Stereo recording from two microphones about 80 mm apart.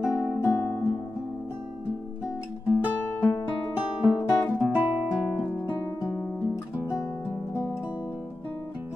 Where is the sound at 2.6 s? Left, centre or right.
Centre.